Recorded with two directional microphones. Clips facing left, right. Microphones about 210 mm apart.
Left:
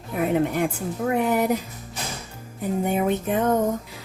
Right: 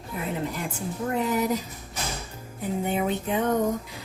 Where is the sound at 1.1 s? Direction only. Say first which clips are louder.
Left 3 dB; 60° left (ahead or behind).